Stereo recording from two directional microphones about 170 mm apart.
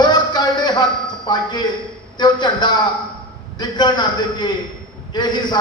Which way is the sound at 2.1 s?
25° left (ahead or behind).